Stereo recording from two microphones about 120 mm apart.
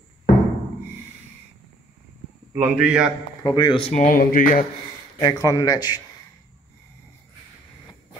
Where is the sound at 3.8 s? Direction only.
70° left (ahead or behind).